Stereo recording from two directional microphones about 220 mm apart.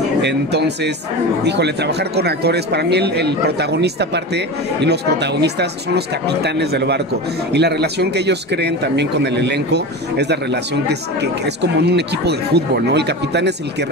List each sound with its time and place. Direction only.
0.2 s speech: 50° right (ahead or behind)